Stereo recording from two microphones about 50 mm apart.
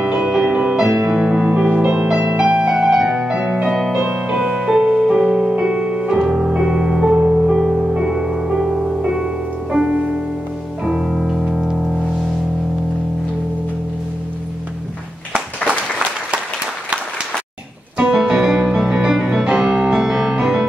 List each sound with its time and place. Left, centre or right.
0.0 s music: right
3.7 s music: centre
4.0 s music: centre
11.1 s music: centre
18.1 s music: centre